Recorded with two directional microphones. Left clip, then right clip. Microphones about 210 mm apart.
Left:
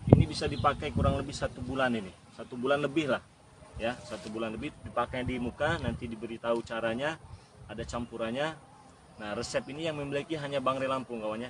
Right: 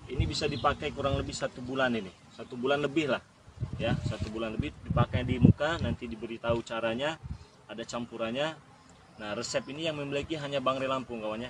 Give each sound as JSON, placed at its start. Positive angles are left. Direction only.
{"t": 0.2, "sound": "speech", "side_deg": -10}